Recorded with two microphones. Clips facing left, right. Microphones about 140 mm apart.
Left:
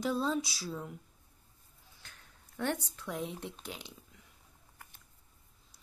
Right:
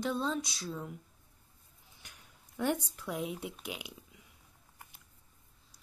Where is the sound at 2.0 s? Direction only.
15° right (ahead or behind).